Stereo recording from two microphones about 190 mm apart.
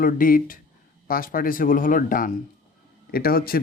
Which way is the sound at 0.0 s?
50° left (ahead or behind).